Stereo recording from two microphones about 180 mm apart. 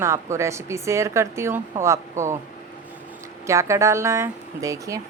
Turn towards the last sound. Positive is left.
turn(degrees=-20)  # may be behind; listen again after turning